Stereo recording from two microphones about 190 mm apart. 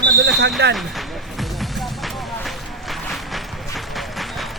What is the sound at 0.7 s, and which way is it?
Music, centre (ahead or behind).